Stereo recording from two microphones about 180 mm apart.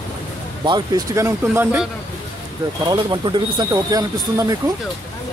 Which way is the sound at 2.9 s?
25° right (ahead or behind).